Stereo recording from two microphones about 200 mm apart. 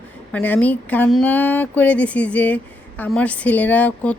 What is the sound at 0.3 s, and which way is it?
A woman's voice, 10° left (ahead or behind).